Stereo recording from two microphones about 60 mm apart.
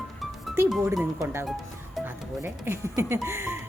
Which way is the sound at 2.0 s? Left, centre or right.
Right.